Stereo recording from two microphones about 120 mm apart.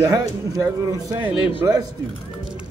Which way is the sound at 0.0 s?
30° right (ahead or behind).